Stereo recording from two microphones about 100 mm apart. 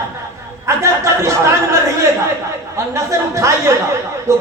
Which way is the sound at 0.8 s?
30° right (ahead or behind).